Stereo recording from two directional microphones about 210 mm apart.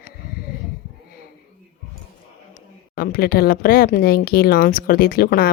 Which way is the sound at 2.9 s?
45° left (ahead or behind).